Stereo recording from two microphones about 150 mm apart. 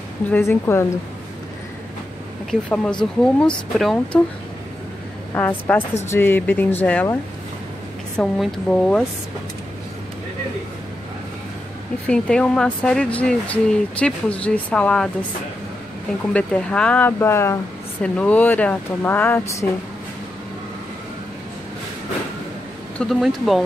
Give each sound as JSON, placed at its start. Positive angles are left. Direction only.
{"t": 0.3, "sound": "speech", "side_deg": 15}
{"t": 2.7, "sound": "speech", "side_deg": 5}
{"t": 5.3, "sound": "speech", "side_deg": 10}
{"t": 8.2, "sound": "speech", "side_deg": 5}
{"t": 12.1, "sound": "speech", "side_deg": 5}
{"t": 16.3, "sound": "speech", "side_deg": 5}
{"t": 22.9, "sound": "speech", "side_deg": 0}